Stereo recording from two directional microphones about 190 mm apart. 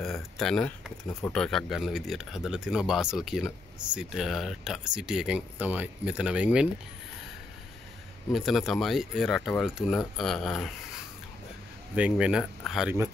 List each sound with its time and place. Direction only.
0.0 s speech: centre (ahead or behind)
8.3 s speech: centre (ahead or behind)
11.9 s speech: 5° right (ahead or behind)